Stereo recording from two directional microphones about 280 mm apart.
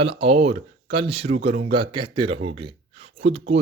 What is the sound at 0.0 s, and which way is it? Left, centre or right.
Speech, centre.